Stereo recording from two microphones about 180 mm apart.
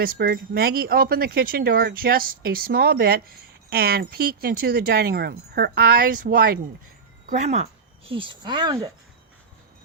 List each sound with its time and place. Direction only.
0.0 s speech: 55° right (ahead or behind)
7.3 s speech: 40° right (ahead or behind); by 8.9 s 20° right (ahead or behind)